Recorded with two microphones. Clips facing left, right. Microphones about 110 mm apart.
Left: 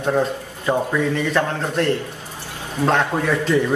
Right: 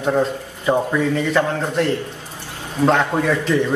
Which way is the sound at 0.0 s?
5° right (ahead or behind).